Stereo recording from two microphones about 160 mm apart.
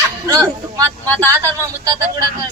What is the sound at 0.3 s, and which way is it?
Speech, 25° right (ahead or behind).